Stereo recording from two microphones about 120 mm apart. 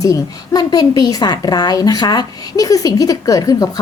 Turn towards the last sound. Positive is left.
turn(degrees=30)  # may be behind; listen again after turning